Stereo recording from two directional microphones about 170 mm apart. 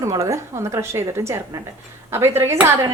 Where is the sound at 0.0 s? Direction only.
20° right (ahead or behind).